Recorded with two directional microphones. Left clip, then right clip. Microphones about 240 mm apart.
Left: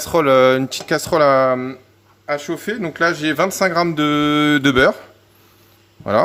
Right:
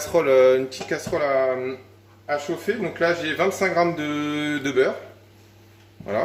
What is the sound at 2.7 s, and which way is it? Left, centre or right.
Speech, left.